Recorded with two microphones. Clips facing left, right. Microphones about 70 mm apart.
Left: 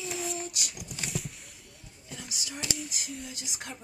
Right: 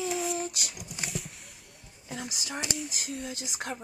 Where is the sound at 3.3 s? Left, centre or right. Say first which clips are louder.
Right 5 dB; right.